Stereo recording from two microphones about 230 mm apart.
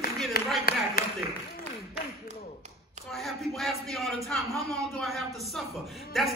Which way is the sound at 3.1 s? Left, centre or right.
Centre.